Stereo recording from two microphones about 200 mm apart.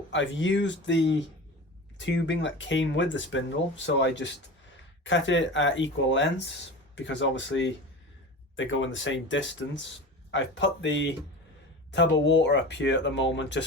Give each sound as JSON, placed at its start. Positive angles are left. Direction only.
{"t": 0.1, "sound": "speech", "side_deg": 65}